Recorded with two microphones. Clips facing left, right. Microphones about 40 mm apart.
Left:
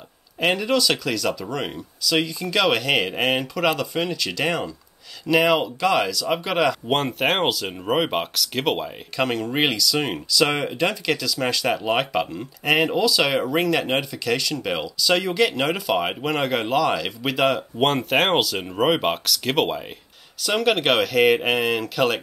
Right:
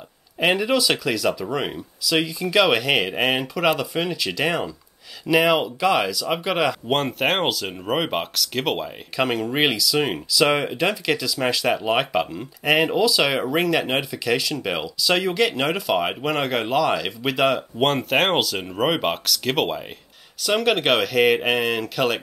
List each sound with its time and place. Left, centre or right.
0.4 s speech: centre